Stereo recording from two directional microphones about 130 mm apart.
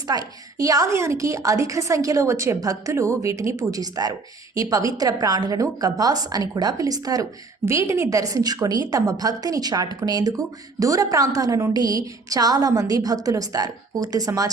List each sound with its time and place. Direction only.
0.1 s a woman's voice: 30° right (ahead or behind)